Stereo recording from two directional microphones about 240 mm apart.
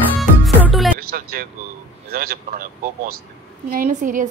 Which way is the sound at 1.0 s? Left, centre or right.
Right.